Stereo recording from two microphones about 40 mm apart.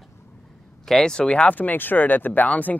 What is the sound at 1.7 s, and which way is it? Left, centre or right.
Speech, left.